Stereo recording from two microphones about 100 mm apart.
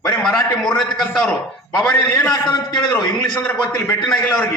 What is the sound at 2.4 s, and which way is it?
Speech, 45° left (ahead or behind).